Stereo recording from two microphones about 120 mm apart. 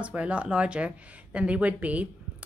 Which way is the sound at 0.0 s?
10° right (ahead or behind).